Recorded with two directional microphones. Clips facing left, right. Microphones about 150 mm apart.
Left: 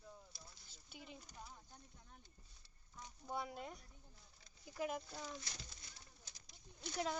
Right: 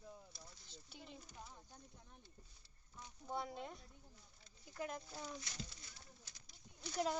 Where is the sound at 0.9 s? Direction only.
5° left (ahead or behind).